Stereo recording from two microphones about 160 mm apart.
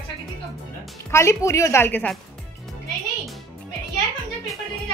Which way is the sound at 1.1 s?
20° left (ahead or behind).